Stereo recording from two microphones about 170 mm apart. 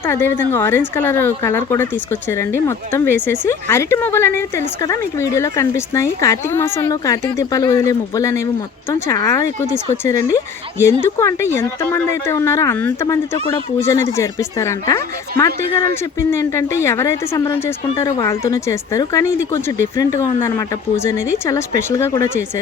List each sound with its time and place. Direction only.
0.0 s a woman's voice: 15° left (ahead or behind)